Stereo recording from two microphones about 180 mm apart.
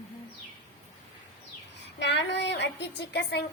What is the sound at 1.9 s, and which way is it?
Speech, 80° left.